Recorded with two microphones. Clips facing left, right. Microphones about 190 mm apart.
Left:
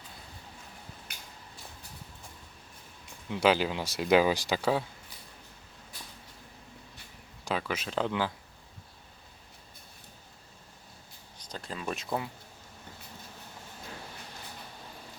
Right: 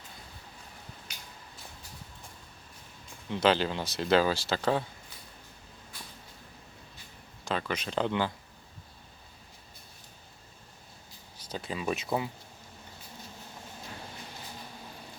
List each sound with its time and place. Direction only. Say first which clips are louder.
1.1 s a sound: even; 55° left (ahead or behind)
3.2 s speech: even; 10° left (ahead or behind)
7.4 s speech: even; 5° left (ahead or behind)
11.3 s speech: right 4 dB; 5° right (ahead or behind)